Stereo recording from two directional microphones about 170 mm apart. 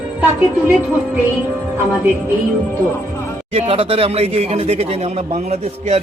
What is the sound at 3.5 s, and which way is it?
Speech, 35° right (ahead or behind).